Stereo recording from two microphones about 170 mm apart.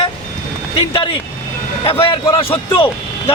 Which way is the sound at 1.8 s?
30° left (ahead or behind).